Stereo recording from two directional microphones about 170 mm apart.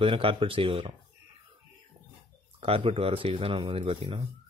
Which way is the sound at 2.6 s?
30° right (ahead or behind).